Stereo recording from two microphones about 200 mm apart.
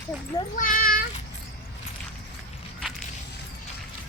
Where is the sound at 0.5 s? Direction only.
40° left (ahead or behind).